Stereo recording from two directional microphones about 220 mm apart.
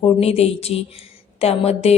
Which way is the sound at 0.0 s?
25° left (ahead or behind).